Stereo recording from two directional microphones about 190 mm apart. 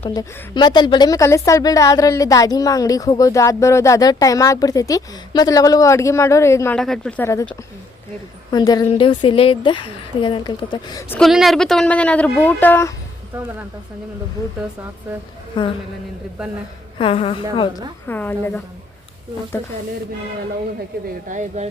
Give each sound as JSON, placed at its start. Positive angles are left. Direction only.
{"t": 0.1, "sound": "a woman's voice", "side_deg": 20}
{"t": 6.7, "sound": "speech", "side_deg": 5}
{"t": 8.4, "sound": "a woman's voice", "side_deg": 20}
{"t": 11.1, "sound": "a woman's voice", "side_deg": 0}
{"t": 13.3, "sound": "speech", "side_deg": -10}
{"t": 15.6, "sound": "a woman's voice", "side_deg": 25}
{"t": 17.0, "sound": "a woman's voice", "side_deg": 30}
{"t": 18.0, "sound": "a woman's voice", "side_deg": 10}
{"t": 21.2, "sound": "speech", "side_deg": -40}